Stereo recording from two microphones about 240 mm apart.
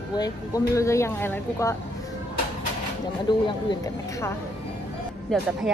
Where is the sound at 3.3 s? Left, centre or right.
Centre.